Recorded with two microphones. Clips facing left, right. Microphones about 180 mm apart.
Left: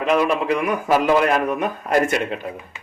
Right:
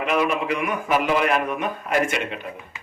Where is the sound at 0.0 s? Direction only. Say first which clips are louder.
Left 3 dB; 35° left (ahead or behind).